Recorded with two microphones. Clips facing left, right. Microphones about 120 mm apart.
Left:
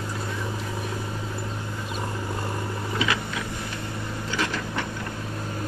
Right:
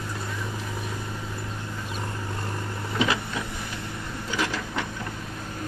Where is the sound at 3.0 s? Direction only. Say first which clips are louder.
Right 3 dB; 25° right (ahead or behind).